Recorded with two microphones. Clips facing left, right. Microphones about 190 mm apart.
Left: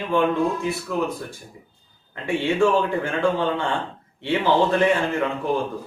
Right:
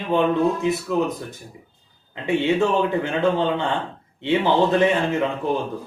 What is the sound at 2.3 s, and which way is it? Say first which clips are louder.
A man's voice: even; 20° right (ahead or behind).